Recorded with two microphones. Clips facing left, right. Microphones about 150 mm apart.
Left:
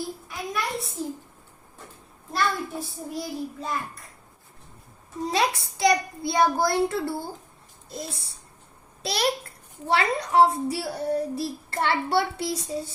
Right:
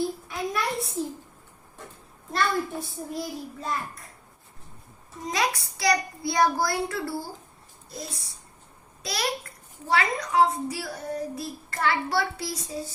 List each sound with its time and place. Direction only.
0.3 s a sound: centre (ahead or behind)
2.3 s a child's voice: centre (ahead or behind)
5.2 s a child's voice: 30° left (ahead or behind)
9.8 s a child's voice: 30° left (ahead or behind)